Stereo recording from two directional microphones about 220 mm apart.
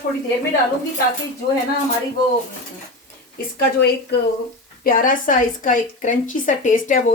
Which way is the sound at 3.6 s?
50° left (ahead or behind).